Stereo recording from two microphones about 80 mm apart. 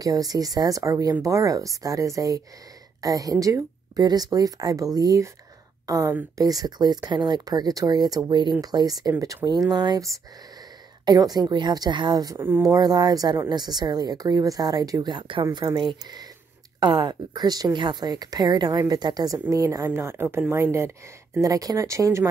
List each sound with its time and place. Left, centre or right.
0.0 s a woman's voice: right
8.3 s speech: right
8.5 s a woman's voice: right
11.1 s a woman's voice: right
12.4 s speech: right
12.6 s a woman's voice: right
16.8 s a woman's voice: right
19.9 s speech: right
21.4 s speech: right